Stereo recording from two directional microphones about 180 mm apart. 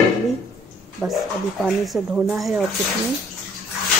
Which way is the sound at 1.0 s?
10° right (ahead or behind).